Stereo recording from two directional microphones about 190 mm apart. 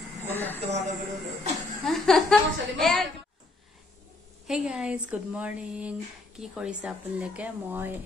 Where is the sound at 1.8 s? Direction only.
Centre (ahead or behind).